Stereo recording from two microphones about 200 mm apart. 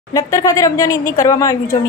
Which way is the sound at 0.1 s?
15° left (ahead or behind).